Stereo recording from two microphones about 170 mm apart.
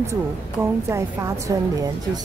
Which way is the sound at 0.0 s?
15° right (ahead or behind).